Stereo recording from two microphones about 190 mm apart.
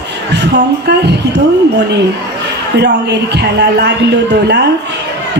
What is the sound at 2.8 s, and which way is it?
A man's voice, 65° right (ahead or behind).